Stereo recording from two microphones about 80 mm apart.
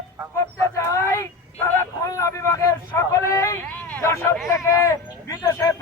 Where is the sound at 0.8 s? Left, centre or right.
Left.